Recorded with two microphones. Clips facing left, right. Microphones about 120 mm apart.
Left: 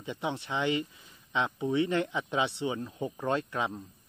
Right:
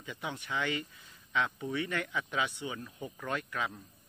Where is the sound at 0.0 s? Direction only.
25° left (ahead or behind).